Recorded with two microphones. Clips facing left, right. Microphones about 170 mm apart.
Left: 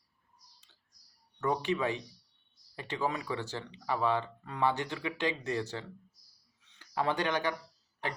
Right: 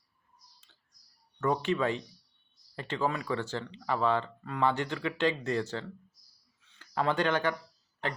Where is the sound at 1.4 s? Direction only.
15° left (ahead or behind).